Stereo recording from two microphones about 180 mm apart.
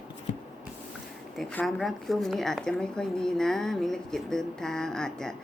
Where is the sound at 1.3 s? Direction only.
5° left (ahead or behind).